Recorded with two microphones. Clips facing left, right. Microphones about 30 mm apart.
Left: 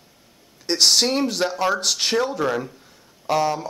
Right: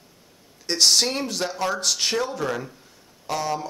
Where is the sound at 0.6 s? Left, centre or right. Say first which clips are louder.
Left 2 dB; centre.